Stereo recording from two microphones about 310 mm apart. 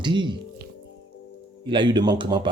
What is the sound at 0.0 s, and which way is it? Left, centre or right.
Speech, centre.